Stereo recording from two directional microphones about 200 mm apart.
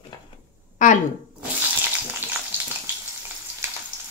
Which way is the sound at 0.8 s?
40° left (ahead or behind).